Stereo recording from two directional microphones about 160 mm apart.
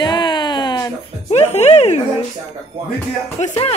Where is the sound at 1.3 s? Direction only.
40° left (ahead or behind).